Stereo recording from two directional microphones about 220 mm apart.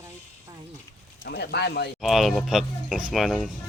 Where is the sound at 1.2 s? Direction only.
45° left (ahead or behind).